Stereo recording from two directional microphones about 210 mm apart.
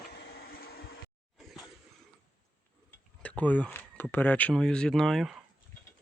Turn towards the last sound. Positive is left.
turn(degrees=0)  # may be behind; listen again after turning